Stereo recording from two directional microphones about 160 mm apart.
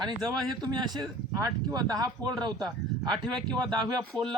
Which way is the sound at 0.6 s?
25° right (ahead or behind).